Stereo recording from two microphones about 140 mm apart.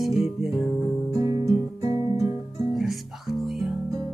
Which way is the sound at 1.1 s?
25° right (ahead or behind).